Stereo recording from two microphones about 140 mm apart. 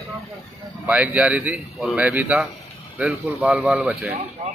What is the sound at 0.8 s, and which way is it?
A man's voice, 10° right (ahead or behind).